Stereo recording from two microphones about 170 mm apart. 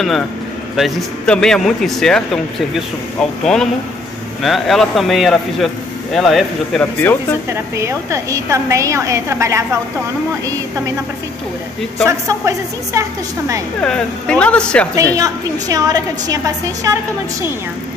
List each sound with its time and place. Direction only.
0.7 s speech: centre (ahead or behind)
7.0 s speech: 15° left (ahead or behind)
7.4 s a woman's voice: 15° right (ahead or behind)
12.1 s a woman's voice: 15° right (ahead or behind)
13.7 s speech: 5° left (ahead or behind)
15.1 s a woman's voice: 20° right (ahead or behind)